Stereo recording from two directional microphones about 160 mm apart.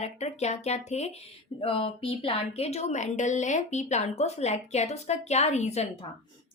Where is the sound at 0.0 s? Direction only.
45° left (ahead or behind).